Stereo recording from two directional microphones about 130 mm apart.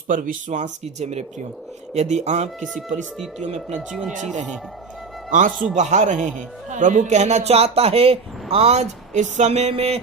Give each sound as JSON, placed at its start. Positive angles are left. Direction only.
{"t": 0.1, "sound": "a man's voice", "side_deg": -90}
{"t": 3.8, "sound": "speech", "side_deg": -5}
{"t": 5.3, "sound": "speech", "side_deg": -80}
{"t": 5.7, "sound": "a man's voice", "side_deg": -60}